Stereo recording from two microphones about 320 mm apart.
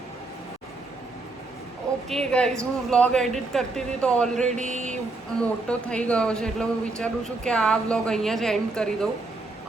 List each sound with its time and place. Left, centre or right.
2.0 s speech: centre
4.5 s speech: right
5.4 s speech: centre